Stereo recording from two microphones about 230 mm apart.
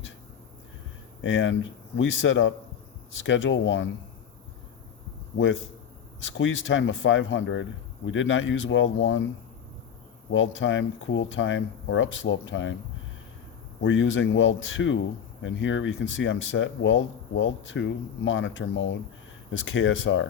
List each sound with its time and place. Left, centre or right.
1.2 s speech: left
6.1 s speech: left
10.3 s speech: left
13.8 s speech: left